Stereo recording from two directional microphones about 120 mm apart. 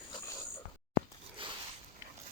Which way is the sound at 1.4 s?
50° right (ahead or behind).